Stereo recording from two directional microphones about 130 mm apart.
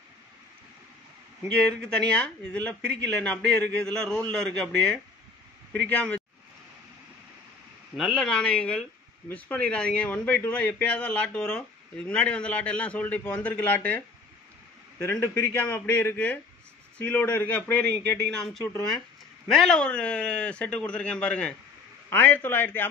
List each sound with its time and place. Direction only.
1.5 s speech: 10° left (ahead or behind)
7.9 s speech: centre (ahead or behind)